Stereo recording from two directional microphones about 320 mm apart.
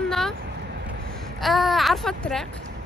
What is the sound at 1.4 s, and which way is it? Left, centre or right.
A woman's voice, centre.